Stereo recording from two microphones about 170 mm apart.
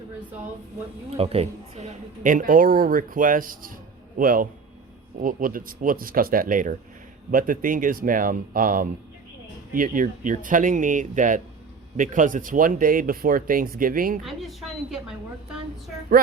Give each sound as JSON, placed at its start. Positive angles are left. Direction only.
{"t": 1.1, "sound": "a woman's voice", "side_deg": -35}
{"t": 2.2, "sound": "speech", "side_deg": -55}
{"t": 14.3, "sound": "a woman's voice", "side_deg": 0}